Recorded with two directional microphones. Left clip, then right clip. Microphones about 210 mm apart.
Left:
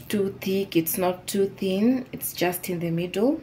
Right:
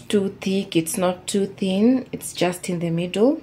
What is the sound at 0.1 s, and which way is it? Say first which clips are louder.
Speech: right 3 dB; 25° right (ahead or behind).